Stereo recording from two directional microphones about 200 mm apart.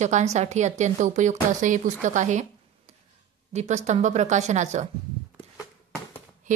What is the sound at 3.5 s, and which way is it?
A woman's voice, 35° right (ahead or behind).